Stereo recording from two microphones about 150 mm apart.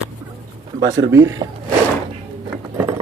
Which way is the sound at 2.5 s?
15° right (ahead or behind).